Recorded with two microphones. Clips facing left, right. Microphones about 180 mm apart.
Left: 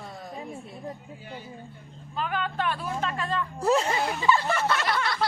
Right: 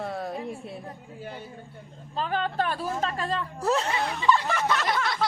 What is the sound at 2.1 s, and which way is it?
Speech, 35° right (ahead or behind).